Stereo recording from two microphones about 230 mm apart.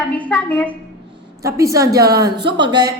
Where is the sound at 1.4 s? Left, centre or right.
Centre.